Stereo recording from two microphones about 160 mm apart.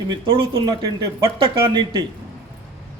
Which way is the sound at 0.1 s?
30° right (ahead or behind).